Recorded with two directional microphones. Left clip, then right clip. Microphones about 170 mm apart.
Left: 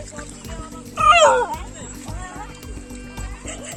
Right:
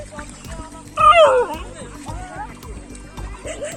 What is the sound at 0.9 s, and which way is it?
Music, 25° left (ahead or behind).